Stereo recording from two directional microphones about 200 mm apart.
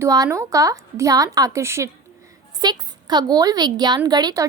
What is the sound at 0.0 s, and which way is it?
A woman's voice, 15° right (ahead or behind).